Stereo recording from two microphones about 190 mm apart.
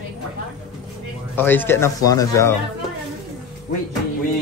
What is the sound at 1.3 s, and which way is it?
Speech, 10° left (ahead or behind).